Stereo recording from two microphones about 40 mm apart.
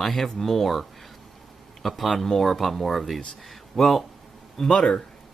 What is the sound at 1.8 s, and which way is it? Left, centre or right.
Speech, centre.